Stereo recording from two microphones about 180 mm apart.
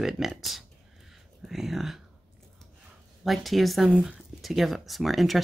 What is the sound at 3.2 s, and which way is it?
Speech, centre (ahead or behind).